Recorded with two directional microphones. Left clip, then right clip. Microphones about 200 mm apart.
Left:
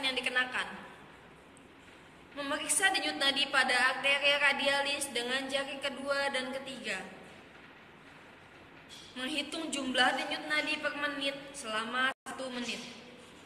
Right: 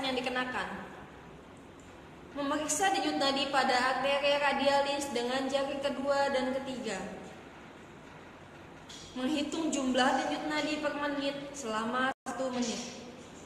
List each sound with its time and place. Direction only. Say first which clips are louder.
0.0 s a sound: left 1 dB; 25° right (ahead or behind)
2.3 s a woman's voice: right 2 dB; 25° right (ahead or behind)
9.2 s a woman's voice: right 3 dB; 30° right (ahead or behind)